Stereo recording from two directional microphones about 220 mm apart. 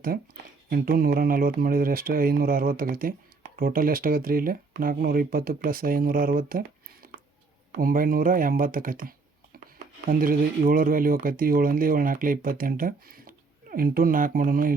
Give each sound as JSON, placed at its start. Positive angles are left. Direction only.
{"t": 0.7, "sound": "speech", "side_deg": -45}
{"t": 7.0, "sound": "a sound", "side_deg": -40}
{"t": 7.8, "sound": "speech", "side_deg": -40}